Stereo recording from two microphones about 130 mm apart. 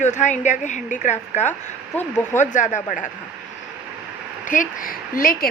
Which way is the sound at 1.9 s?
15° left (ahead or behind).